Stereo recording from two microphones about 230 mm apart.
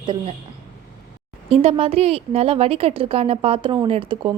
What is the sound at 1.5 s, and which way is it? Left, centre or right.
A woman's voice, right.